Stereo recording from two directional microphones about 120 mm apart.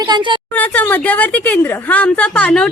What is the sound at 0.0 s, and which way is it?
Speech, 40° right (ahead or behind).